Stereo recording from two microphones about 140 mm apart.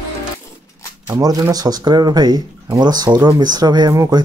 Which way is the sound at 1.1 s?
25° right (ahead or behind).